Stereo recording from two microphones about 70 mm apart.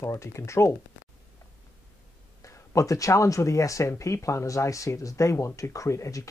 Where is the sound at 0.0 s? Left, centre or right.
Left.